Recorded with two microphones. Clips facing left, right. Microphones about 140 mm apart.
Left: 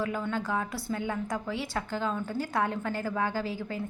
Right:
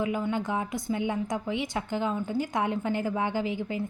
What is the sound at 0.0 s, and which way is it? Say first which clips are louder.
A woman's voice: right 3 dB; 15° right (ahead or behind).